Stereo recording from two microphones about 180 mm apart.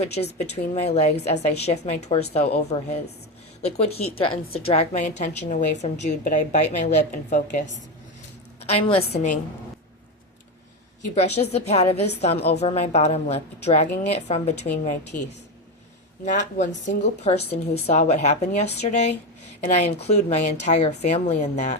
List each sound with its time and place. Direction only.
0.3 s a woman's voice: 35° left (ahead or behind)
11.0 s a woman's voice: 35° left (ahead or behind)
15.1 s a woman's voice: 50° left (ahead or behind)